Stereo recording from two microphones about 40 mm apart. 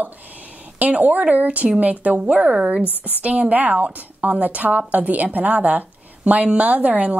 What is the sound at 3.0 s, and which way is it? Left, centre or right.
A woman's voice, right.